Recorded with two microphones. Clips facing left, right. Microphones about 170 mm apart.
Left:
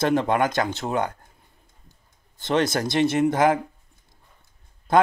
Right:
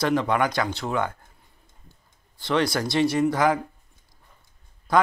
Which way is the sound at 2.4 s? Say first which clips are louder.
Left 1 dB; 45° left (ahead or behind).